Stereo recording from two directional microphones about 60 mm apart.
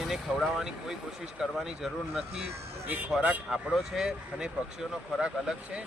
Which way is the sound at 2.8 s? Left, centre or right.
Right.